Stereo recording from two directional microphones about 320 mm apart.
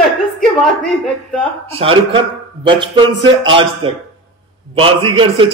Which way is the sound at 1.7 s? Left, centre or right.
Centre.